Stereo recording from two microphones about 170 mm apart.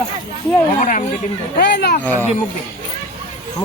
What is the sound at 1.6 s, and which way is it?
Speech, 80° left.